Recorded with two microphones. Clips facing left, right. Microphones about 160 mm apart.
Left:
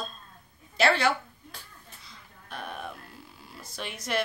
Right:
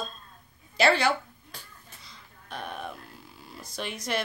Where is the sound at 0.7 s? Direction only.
Centre (ahead or behind).